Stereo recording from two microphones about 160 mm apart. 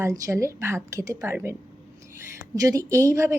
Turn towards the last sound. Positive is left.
turn(degrees=-20)  # may be behind; listen again after turning